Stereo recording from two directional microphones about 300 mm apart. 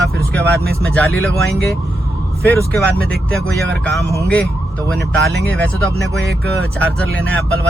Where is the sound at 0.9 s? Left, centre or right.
Centre.